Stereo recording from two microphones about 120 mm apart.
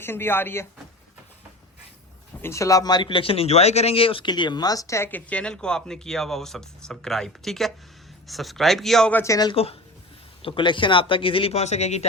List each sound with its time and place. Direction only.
0.0 s speech: 20° left (ahead or behind)
2.4 s speech: 25° left (ahead or behind); by 9.1 s 5° left (ahead or behind)
9.1 s speech: 25° left (ahead or behind)
9.5 s speech: 55° left (ahead or behind)
10.4 s speech: 45° left (ahead or behind); by 12.0 s 65° left (ahead or behind)